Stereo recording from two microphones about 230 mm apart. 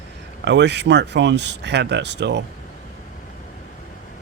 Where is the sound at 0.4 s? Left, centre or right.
Right.